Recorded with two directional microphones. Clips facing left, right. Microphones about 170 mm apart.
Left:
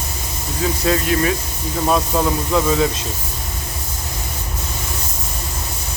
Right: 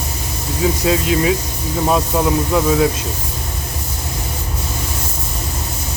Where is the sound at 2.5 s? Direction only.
5° right (ahead or behind).